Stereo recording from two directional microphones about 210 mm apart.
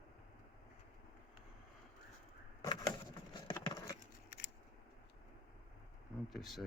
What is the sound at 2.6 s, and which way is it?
Vehicle, 20° left (ahead or behind).